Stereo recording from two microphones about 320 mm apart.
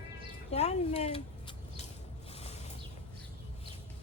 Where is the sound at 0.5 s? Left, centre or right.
Centre.